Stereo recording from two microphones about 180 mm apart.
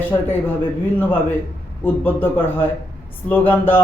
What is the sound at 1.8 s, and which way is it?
A man's voice, 10° left (ahead or behind).